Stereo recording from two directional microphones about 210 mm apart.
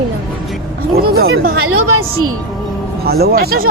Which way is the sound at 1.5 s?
85° right.